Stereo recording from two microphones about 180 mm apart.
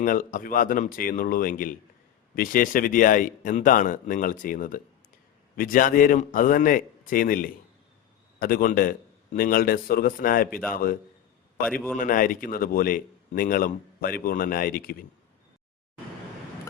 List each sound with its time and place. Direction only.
0.0 s speech: 50° left (ahead or behind)
10.5 s a man's voice: 10° left (ahead or behind)
11.9 s speech: 50° left (ahead or behind)